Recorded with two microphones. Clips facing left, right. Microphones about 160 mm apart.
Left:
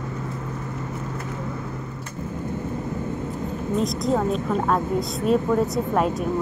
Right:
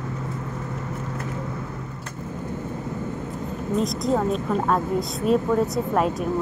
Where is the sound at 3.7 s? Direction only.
Centre (ahead or behind).